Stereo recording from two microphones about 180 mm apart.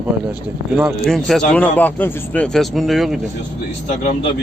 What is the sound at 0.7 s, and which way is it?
Speech, centre (ahead or behind).